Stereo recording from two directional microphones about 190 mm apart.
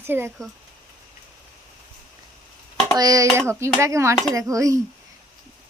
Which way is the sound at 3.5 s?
15° right (ahead or behind).